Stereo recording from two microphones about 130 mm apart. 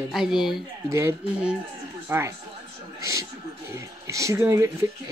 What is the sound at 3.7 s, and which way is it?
Speech, 25° right (ahead or behind).